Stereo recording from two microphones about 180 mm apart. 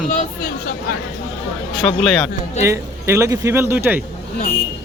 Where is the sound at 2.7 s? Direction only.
15° right (ahead or behind).